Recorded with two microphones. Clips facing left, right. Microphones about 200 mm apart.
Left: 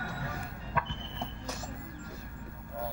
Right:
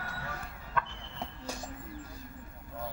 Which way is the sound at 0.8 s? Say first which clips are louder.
Even; 10° left (ahead or behind).